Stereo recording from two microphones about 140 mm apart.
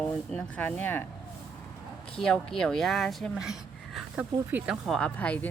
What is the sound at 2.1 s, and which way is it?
A woman's voice, 5° left (ahead or behind).